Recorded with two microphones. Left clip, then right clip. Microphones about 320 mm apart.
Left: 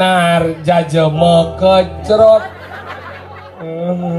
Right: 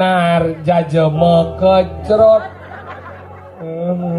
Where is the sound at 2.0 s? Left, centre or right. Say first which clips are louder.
Left 2 dB; right.